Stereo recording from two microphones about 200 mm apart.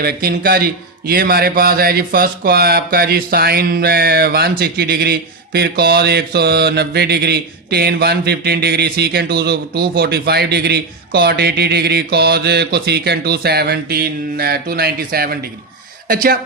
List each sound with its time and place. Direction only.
0.0 s speech: 50° right (ahead or behind)